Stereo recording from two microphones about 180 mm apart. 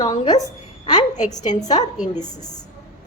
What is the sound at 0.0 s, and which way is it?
Speech, 20° left (ahead or behind).